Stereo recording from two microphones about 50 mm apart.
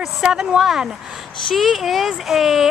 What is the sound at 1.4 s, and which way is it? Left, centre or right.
Speech, centre.